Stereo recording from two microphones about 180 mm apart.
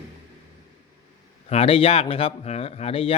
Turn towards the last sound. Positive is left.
turn(degrees=30)  # may be behind; listen again after turning